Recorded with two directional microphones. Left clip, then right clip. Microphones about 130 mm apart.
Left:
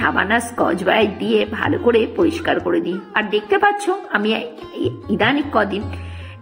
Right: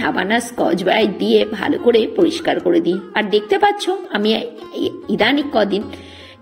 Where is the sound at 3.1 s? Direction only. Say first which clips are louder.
Even; 20° right (ahead or behind).